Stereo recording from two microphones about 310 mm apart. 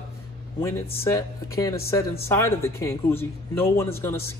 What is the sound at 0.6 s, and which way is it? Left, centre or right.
A man's voice, centre.